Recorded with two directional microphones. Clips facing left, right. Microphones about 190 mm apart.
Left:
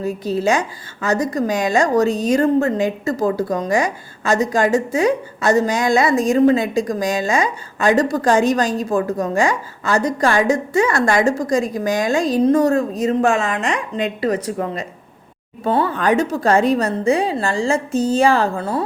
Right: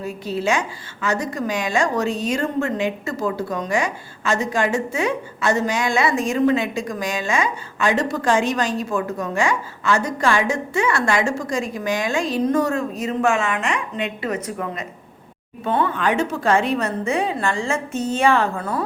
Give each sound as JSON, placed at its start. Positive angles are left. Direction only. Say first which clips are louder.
{"t": 0.0, "sound": "a woman's voice", "louder": "left 5 dB", "side_deg": 40}